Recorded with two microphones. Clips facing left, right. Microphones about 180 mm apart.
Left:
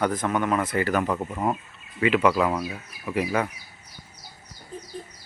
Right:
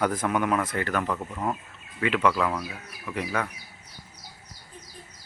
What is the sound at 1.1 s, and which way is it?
Speech, 20° left (ahead or behind).